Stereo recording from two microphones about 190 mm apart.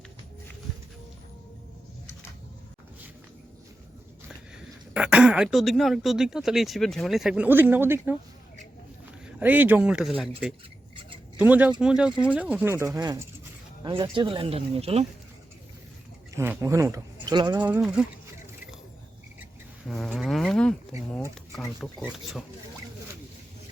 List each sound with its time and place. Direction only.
4.9 s speech: 5° right (ahead or behind)
9.2 s speech: 10° right (ahead or behind); by 15.0 s 30° right (ahead or behind)
16.3 s speech: 15° right (ahead or behind)
17.6 s speech: 5° right (ahead or behind)
19.9 s speech: centre (ahead or behind)
22.0 s speech: 5° right (ahead or behind)